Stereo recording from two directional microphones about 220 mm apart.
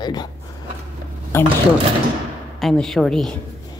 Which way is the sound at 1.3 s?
10° left (ahead or behind).